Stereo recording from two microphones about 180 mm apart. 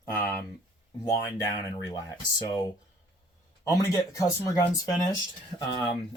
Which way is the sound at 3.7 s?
15° left (ahead or behind).